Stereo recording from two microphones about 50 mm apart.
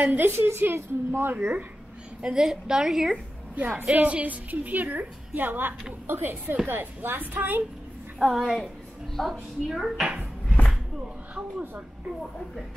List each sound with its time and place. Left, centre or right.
0.0 s a woman's voice: right
0.5 s a woman's voice: right
2.2 s a woman's voice: centre
3.5 s a woman's voice: right
8.3 s a woman's voice: centre